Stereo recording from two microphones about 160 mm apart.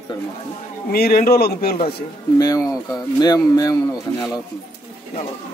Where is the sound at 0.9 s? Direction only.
70° left (ahead or behind).